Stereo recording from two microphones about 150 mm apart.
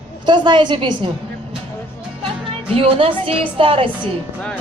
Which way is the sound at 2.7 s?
35° right (ahead or behind).